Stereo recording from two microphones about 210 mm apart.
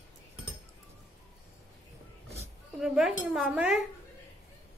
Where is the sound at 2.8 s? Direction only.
Centre (ahead or behind).